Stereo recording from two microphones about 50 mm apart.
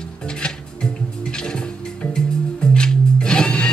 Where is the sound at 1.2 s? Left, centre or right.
Centre.